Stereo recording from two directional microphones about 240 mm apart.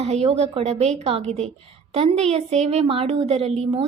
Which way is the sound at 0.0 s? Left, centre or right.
Right.